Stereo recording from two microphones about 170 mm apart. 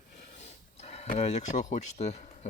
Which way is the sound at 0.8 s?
40° left (ahead or behind).